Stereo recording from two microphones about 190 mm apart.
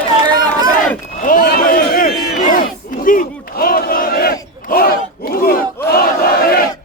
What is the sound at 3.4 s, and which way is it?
Battle cry, 50° left (ahead or behind).